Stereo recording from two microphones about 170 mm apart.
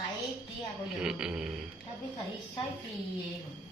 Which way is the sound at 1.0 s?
5° right (ahead or behind).